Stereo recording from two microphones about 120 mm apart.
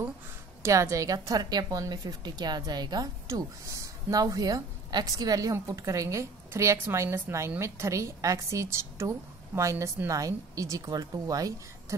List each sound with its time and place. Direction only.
0.6 s a woman's voice: 25° right (ahead or behind)